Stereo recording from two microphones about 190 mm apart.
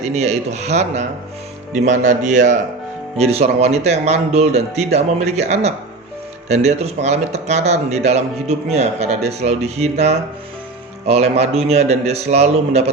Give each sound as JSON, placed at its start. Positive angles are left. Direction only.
{"t": 0.1, "sound": "a man's voice", "side_deg": -35}